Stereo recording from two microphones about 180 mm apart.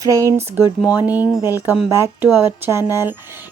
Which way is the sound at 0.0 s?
20° right (ahead or behind).